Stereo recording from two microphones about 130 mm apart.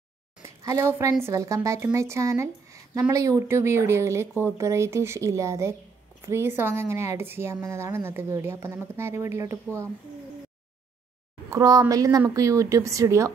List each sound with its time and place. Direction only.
0.4 s a sound: 25° right (ahead or behind)
1.2 s a woman's voice: 25° right (ahead or behind)
11.5 s a woman's voice: 25° right (ahead or behind)